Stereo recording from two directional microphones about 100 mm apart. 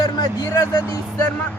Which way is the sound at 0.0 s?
40° left (ahead or behind).